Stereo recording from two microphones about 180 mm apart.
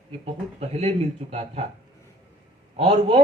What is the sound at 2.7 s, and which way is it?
Speech, 30° right (ahead or behind).